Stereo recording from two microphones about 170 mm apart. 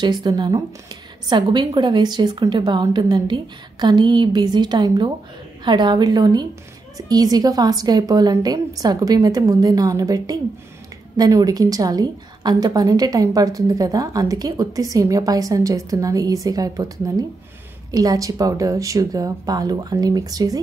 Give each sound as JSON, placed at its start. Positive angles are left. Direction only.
{"t": 0.0, "sound": "a woman's voice", "side_deg": -25}